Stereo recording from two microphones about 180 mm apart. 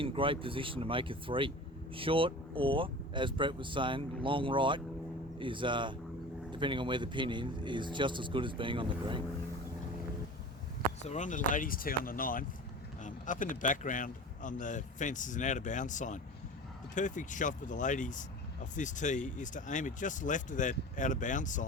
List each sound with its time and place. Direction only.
0.0 s speech: 30° right (ahead or behind)
11.0 s speech: 40° left (ahead or behind)